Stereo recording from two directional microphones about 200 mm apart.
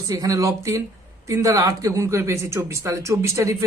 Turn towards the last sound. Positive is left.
turn(degrees=-15)  # may be behind; listen again after turning